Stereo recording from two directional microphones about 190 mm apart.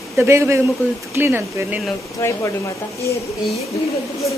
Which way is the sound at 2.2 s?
15° left (ahead or behind).